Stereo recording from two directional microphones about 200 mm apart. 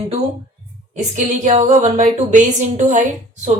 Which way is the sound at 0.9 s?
35° right (ahead or behind).